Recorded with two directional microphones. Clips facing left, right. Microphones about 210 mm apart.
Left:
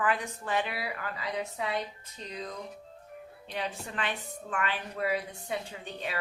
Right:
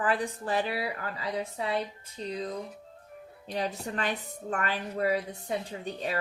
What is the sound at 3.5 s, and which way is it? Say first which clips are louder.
A woman's voice: right 4 dB; 40° right (ahead or behind).